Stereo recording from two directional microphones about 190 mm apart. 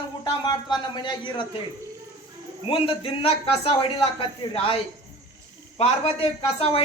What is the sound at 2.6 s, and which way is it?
A man's voice, 30° left (ahead or behind).